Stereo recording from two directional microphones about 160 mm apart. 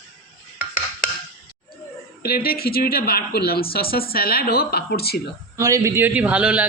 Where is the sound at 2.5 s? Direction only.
70° left (ahead or behind).